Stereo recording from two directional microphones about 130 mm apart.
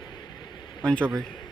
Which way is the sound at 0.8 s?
10° left (ahead or behind).